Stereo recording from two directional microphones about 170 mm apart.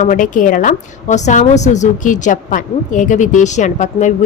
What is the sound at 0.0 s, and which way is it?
A woman's voice, 50° left (ahead or behind).